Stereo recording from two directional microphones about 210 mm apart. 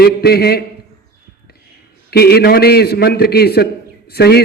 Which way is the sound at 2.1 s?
50° left (ahead or behind).